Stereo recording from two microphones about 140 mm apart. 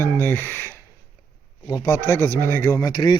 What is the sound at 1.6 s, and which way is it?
Speech, 25° left (ahead or behind).